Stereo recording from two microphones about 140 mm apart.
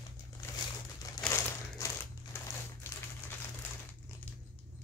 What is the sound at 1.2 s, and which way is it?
Crumpling, 5° left (ahead or behind).